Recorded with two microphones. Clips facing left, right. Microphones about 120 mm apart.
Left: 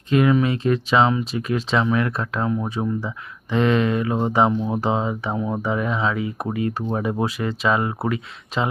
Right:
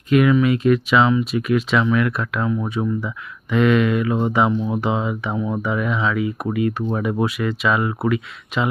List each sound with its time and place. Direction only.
0.1 s speech: 30° left (ahead or behind)